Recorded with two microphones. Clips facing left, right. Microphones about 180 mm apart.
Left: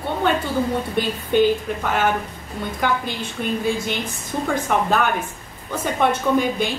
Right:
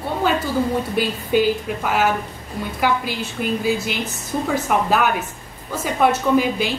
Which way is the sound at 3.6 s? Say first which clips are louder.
Right 1 dB; 5° right (ahead or behind).